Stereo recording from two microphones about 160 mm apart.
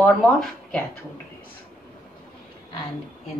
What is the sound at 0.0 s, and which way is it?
Speech, 5° left (ahead or behind).